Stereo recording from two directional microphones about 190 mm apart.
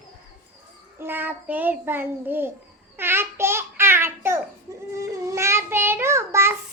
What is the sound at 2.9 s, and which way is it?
Babbling, 10° right (ahead or behind).